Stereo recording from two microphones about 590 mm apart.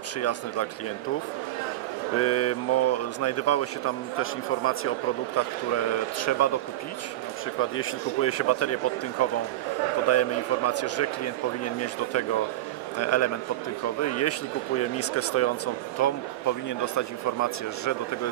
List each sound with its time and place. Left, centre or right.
0.2 s speech: left
2.1 s speech: left
7.7 s speech: left